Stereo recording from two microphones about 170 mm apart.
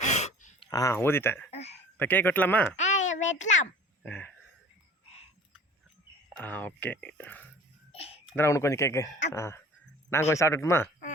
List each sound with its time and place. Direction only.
0.0 s a sound: 40° left (ahead or behind)
0.6 s speech: 20° left (ahead or behind)
1.5 s speech: 40° left (ahead or behind)
2.0 s speech: 10° left (ahead or behind)
2.7 s a child's voice: 45° left (ahead or behind)
4.0 s speech: 10° left (ahead or behind)
6.3 s speech: 10° left (ahead or behind)
7.9 s a sound: 35° left (ahead or behind)
8.4 s speech: 15° left (ahead or behind)